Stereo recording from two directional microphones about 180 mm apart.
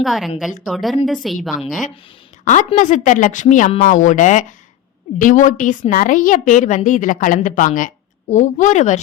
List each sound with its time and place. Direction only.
0.0 s a woman's voice: centre (ahead or behind)
2.4 s a woman's voice: 45° left (ahead or behind)